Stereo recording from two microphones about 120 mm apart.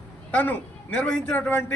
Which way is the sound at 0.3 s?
15° left (ahead or behind).